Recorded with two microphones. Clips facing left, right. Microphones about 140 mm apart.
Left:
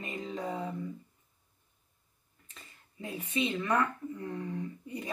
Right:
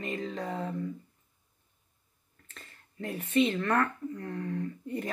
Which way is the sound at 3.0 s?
15° left (ahead or behind).